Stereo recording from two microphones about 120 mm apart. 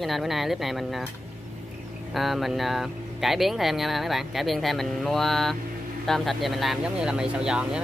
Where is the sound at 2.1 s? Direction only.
Centre (ahead or behind).